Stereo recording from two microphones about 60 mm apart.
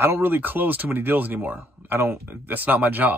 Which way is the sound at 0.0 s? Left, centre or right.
Right.